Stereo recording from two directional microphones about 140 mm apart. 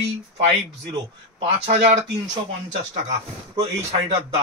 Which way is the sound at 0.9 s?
40° right (ahead or behind).